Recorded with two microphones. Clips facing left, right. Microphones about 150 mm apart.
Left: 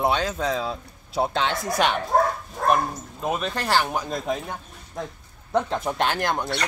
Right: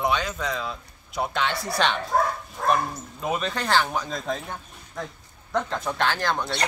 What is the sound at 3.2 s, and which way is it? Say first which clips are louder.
Speech: left 1 dB; centre (ahead or behind).